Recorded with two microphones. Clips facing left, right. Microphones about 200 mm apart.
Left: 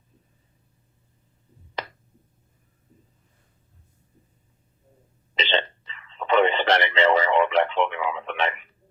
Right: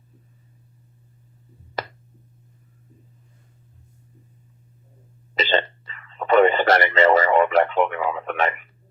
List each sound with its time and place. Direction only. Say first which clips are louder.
5.3 s hiccup: right 4 dB; 45° right (ahead or behind)